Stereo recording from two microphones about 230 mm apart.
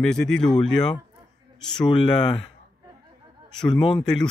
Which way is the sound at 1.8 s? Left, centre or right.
Centre.